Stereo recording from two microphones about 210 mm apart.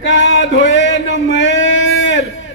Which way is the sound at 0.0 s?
60° left (ahead or behind).